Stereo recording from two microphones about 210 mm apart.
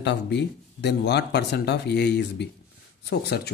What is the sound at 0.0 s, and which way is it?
Speech, 55° left (ahead or behind).